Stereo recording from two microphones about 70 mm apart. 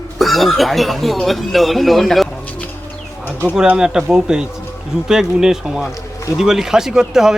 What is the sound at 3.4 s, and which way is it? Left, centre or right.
Speech, centre.